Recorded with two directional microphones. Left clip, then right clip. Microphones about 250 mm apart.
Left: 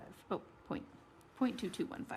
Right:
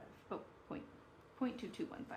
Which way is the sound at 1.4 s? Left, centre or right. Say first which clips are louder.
Left 5 dB; left.